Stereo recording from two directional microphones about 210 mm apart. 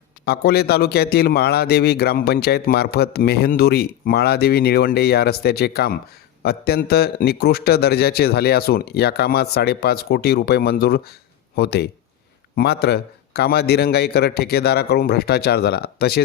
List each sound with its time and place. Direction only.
0.3 s a man's voice: 50° left (ahead or behind)